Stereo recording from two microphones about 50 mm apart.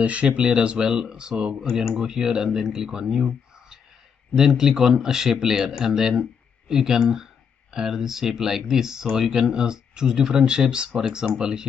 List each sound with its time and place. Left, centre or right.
0.0 s speech: right
4.4 s speech: centre